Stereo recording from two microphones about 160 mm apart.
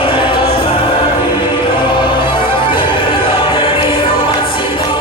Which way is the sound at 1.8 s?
30° left (ahead or behind).